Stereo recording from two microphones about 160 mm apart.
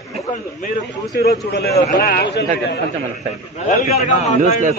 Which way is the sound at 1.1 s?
75° left (ahead or behind).